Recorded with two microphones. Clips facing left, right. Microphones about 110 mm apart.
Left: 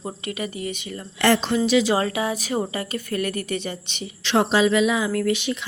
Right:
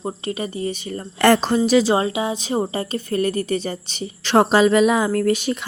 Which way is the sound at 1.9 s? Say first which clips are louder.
Right 2 dB; 20° right (ahead or behind).